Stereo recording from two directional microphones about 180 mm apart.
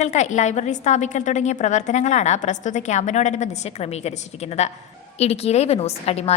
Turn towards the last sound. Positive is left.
turn(degrees=35)  # may be behind; listen again after turning